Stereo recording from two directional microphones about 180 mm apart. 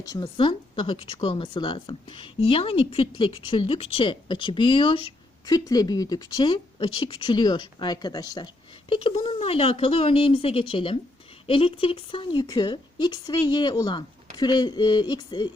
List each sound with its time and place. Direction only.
0.0 s speech: 20° left (ahead or behind)